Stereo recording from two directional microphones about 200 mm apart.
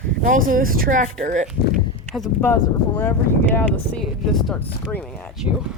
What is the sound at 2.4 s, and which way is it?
Speech, 10° left (ahead or behind).